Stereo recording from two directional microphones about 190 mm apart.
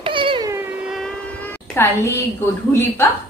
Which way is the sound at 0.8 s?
Centre (ahead or behind).